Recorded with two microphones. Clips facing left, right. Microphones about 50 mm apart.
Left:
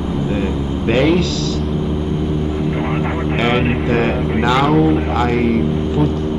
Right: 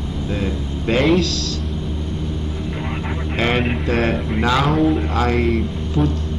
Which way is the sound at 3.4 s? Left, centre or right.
Centre.